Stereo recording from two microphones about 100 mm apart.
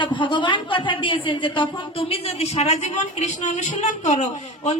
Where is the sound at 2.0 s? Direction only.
85° left.